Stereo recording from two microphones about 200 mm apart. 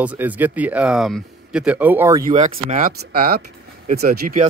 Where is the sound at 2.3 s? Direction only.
30° right (ahead or behind).